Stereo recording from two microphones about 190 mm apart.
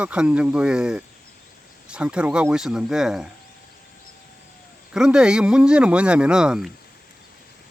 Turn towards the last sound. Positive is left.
turn(degrees=-5)  # may be behind; listen again after turning